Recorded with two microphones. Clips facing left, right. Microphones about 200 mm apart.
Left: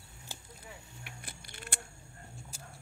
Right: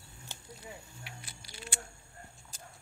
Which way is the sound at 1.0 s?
55° left (ahead or behind).